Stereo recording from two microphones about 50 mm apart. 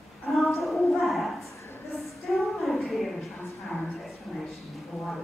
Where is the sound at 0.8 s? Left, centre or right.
Centre.